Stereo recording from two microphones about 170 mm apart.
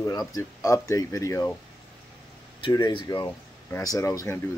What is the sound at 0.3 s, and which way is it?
Speech, 20° left (ahead or behind).